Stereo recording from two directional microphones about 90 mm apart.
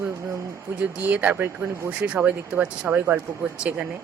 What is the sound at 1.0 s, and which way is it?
Speech, 15° right (ahead or behind).